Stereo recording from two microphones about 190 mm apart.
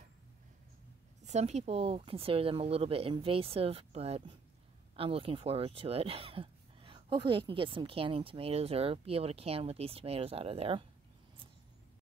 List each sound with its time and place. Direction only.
1.2 s speech: 35° right (ahead or behind)